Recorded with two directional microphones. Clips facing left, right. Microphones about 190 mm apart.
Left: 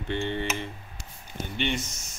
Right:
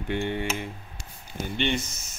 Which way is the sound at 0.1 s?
10° right (ahead or behind).